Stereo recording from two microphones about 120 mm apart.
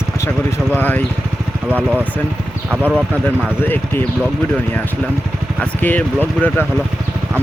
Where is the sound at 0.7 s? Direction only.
15° left (ahead or behind).